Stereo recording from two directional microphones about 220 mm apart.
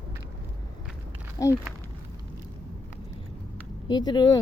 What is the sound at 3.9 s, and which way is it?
Speech, 20° left (ahead or behind).